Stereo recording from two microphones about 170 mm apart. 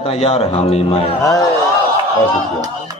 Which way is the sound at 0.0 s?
35° left (ahead or behind).